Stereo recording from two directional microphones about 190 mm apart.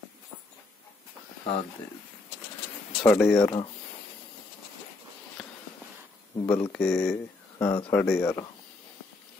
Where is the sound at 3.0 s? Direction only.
Centre (ahead or behind).